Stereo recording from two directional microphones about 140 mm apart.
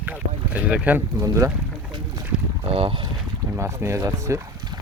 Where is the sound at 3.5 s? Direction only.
20° right (ahead or behind).